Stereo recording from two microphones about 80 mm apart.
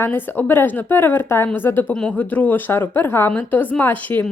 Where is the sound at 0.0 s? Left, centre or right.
Left.